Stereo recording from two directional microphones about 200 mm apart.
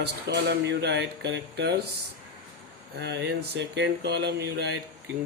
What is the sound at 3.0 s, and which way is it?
Speech, 55° right (ahead or behind).